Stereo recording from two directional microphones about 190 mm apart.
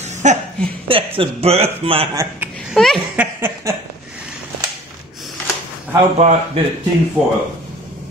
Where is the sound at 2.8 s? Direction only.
Centre (ahead or behind).